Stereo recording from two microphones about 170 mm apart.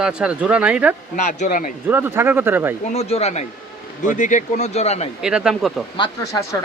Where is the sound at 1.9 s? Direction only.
10° right (ahead or behind).